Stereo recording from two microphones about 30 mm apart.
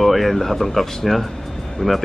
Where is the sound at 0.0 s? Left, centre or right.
Centre.